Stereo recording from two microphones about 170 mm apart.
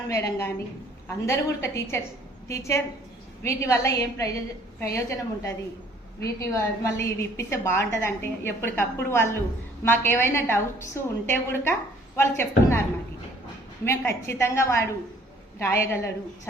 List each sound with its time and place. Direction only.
0.1 s a woman's voice: 15° left (ahead or behind)
13.8 s a woman's voice: 15° left (ahead or behind)